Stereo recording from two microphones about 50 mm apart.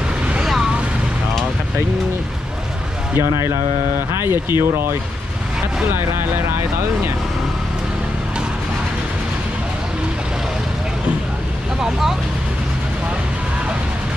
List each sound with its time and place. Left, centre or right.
0.4 s vehicle: centre
3.2 s speech: right
11.8 s speech: centre